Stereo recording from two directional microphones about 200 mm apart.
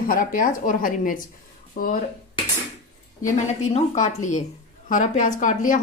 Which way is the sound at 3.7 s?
35° left (ahead or behind).